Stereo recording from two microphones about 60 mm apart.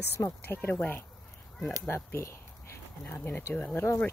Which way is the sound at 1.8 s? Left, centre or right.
Left.